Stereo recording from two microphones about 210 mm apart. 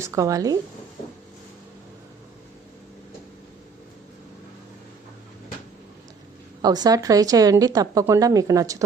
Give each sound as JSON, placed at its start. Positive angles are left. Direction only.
{"t": 0.0, "sound": "speech", "side_deg": -15}
{"t": 6.6, "sound": "speech", "side_deg": -20}